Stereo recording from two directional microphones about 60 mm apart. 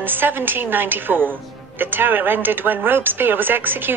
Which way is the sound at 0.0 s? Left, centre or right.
Right.